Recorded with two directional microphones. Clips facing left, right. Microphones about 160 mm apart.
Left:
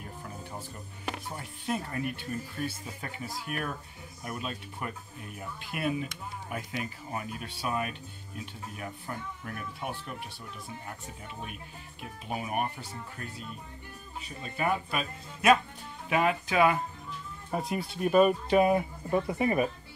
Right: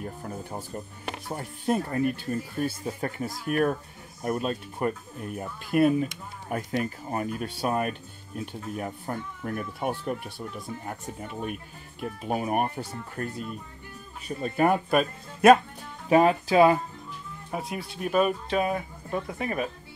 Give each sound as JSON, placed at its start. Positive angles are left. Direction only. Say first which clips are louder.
{"t": 0.0, "sound": "music", "louder": "right 7 dB", "side_deg": -45}
{"t": 1.3, "sound": "speech", "louder": "right 9 dB", "side_deg": -40}
{"t": 16.1, "sound": "speech", "louder": "right 7 dB", "side_deg": -35}
{"t": 17.5, "sound": "speech", "louder": "left 1 dB", "side_deg": 0}